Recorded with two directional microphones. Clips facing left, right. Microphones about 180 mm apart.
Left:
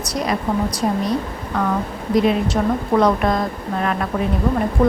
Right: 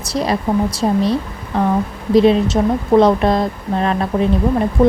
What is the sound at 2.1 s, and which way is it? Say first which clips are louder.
A woman's voice: right 5 dB; 25° right (ahead or behind).